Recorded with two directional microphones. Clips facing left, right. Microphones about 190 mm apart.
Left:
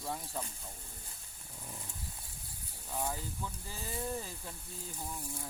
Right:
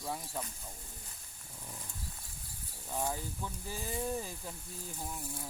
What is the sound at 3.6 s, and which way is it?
Sizzle, 15° right (ahead or behind).